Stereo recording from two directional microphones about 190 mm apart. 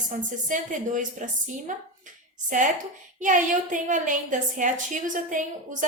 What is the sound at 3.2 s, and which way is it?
A woman's voice, 40° right (ahead or behind).